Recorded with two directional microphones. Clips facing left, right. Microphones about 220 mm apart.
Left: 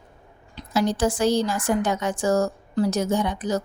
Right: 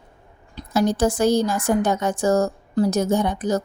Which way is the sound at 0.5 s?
45° right (ahead or behind).